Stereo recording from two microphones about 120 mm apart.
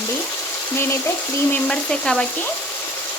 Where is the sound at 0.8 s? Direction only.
20° left (ahead or behind).